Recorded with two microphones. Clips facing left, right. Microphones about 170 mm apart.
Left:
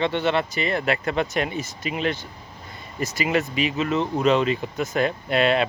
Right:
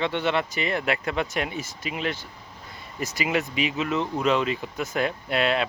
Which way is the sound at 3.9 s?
20° left (ahead or behind).